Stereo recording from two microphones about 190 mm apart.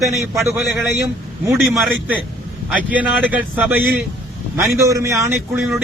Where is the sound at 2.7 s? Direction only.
10° right (ahead or behind).